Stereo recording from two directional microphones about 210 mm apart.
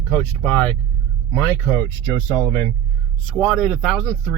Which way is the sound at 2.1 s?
20° left (ahead or behind).